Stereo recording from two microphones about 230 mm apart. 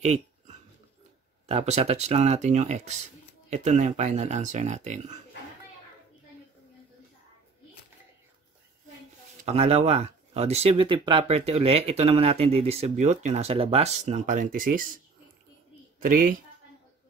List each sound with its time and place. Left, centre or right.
0.0 s a sound: right
1.5 s speech: right
9.4 s speech: right
16.0 s speech: right